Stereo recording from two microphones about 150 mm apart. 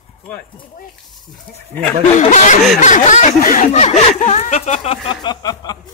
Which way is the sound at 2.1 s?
55° left (ahead or behind).